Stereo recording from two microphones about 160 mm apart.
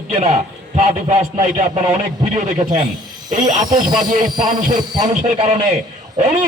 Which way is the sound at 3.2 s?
50° right (ahead or behind).